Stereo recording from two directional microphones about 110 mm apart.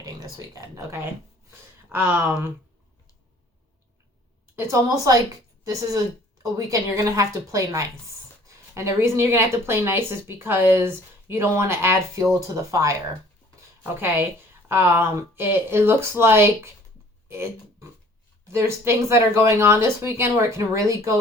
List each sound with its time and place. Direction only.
0.0 s speech: 35° right (ahead or behind); by 2.5 s 15° right (ahead or behind)
4.5 s speech: 25° right (ahead or behind)
6.4 s speech: 30° right (ahead or behind)
13.6 s a sound: 20° right (ahead or behind)
14.7 s speech: 20° right (ahead or behind)
17.2 s a sound: 25° right (ahead or behind)
18.5 s speech: 25° right (ahead or behind)